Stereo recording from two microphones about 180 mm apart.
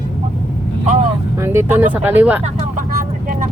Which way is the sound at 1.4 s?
15° right (ahead or behind).